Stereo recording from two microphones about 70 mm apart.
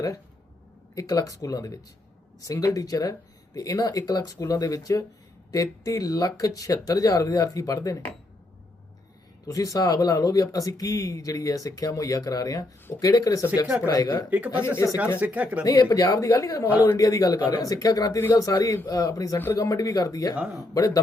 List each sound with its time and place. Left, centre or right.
0.9 s speech: left
9.5 s speech: left
14.3 s speech: right
14.8 s speech: left
15.2 s speech: right
15.6 s speech: left
20.3 s speech: centre
20.7 s speech: left